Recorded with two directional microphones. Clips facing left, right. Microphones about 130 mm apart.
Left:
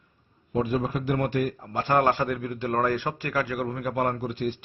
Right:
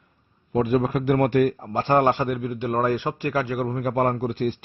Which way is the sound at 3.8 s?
45° right (ahead or behind).